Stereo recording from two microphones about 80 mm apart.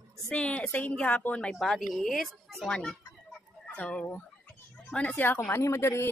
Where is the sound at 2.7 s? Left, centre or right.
Centre.